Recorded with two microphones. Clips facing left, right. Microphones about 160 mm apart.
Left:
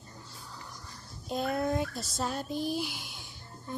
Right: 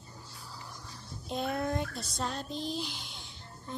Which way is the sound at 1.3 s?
Centre (ahead or behind).